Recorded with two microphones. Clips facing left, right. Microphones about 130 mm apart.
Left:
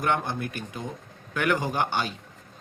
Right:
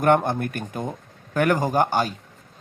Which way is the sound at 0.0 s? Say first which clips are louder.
Right 8 dB; 50° right (ahead or behind).